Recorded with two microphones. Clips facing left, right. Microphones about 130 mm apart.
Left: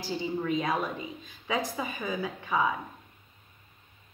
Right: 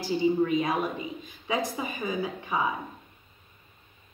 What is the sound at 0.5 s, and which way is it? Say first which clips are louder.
Speech: right 2 dB; 10° right (ahead or behind).